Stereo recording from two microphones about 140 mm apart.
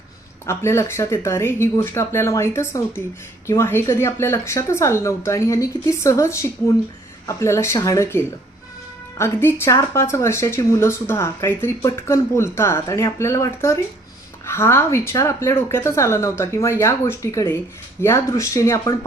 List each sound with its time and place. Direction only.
0.4 s speech: 20° left (ahead or behind)